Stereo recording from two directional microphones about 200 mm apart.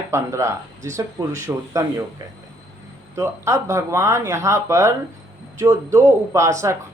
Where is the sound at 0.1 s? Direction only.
15° right (ahead or behind).